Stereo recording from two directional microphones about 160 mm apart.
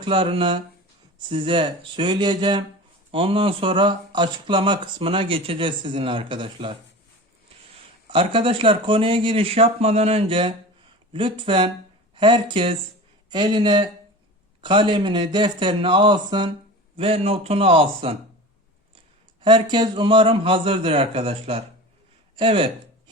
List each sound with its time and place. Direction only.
0.0 s a man's voice: 35° right (ahead or behind)
8.1 s a man's voice: 30° right (ahead or behind)
19.4 s speech: 30° right (ahead or behind)